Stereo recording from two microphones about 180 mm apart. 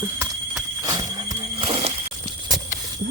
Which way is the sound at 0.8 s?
20° right (ahead or behind).